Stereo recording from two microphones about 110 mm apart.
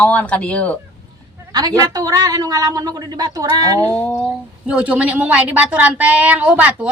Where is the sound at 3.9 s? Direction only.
20° left (ahead or behind).